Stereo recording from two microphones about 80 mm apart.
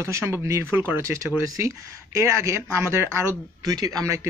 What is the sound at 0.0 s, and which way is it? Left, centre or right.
Speech, right.